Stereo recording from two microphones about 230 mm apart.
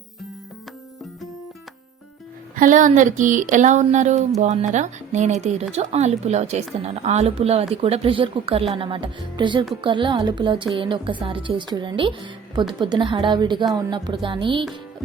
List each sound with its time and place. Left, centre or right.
2.6 s speech: right